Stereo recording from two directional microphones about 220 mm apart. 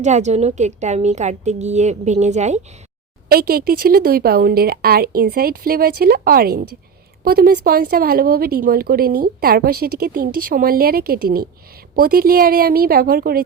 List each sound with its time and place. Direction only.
0.0 s a woman's voice: 30° right (ahead or behind)
3.2 s speech: 45° right (ahead or behind)